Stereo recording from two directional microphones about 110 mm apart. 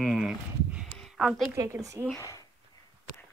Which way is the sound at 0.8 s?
5° left (ahead or behind).